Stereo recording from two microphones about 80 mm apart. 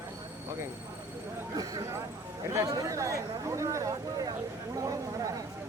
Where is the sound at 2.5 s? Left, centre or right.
Right.